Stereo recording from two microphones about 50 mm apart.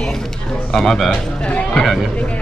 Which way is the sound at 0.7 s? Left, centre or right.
Centre.